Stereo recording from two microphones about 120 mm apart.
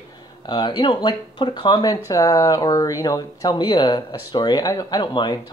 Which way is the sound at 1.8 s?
30° left (ahead or behind).